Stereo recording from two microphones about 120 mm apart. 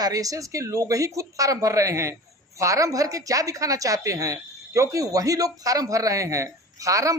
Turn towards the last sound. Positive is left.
turn(degrees=-25)  # may be behind; listen again after turning